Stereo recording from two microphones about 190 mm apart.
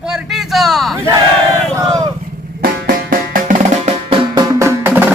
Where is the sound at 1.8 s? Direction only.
20° right (ahead or behind).